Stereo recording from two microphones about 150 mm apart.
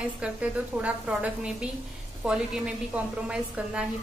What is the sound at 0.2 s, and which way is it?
A woman's voice, 10° right (ahead or behind).